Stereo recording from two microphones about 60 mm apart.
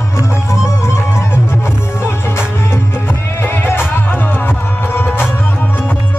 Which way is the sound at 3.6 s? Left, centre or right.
Left.